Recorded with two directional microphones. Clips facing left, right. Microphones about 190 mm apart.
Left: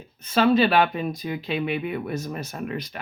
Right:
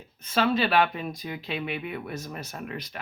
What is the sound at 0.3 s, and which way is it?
Speech, 15° left (ahead or behind).